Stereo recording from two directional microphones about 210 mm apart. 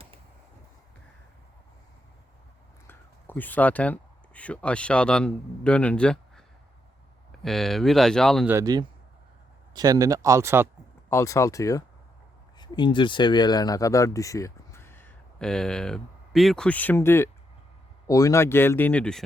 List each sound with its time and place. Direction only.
2.8 s speech: 10° left (ahead or behind)
7.4 s speech: centre (ahead or behind)
8.4 s speech: 15° right (ahead or behind)
11.1 s speech: 15° left (ahead or behind)